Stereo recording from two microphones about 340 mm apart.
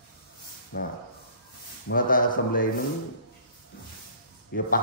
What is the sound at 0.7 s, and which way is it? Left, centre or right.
A man's voice, left.